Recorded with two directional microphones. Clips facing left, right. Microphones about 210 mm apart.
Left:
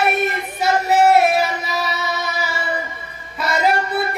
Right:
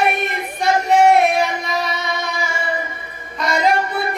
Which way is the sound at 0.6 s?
5° left (ahead or behind).